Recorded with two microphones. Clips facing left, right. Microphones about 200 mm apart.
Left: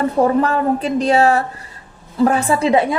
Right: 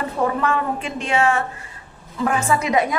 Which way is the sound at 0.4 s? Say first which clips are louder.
Left 5 dB; 35° left (ahead or behind).